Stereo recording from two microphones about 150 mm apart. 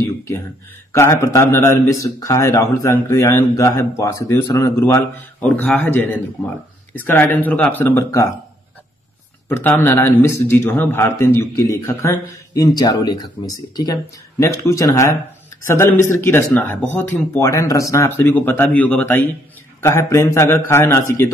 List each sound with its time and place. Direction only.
0.0 s a sound: 20° left (ahead or behind)
0.9 s a man's voice: 20° left (ahead or behind)
9.5 s a man's voice: 15° left (ahead or behind)